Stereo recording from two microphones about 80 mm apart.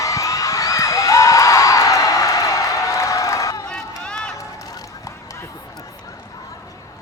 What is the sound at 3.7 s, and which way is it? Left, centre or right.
Run, centre.